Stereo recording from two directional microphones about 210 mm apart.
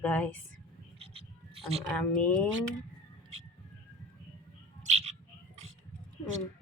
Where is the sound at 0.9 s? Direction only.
25° right (ahead or behind).